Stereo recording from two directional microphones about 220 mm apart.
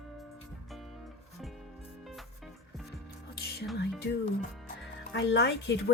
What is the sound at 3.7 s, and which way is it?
Speech, 50° left (ahead or behind).